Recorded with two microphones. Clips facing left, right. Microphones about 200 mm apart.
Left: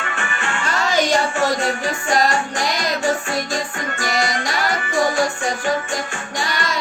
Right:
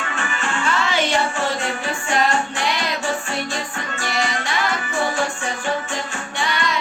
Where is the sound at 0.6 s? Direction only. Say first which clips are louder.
Left 2 dB; 40° left (ahead or behind).